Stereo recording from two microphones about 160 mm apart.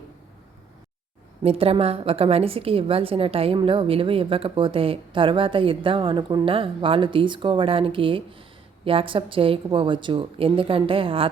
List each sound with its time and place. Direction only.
1.5 s a woman's voice: 35° right (ahead or behind)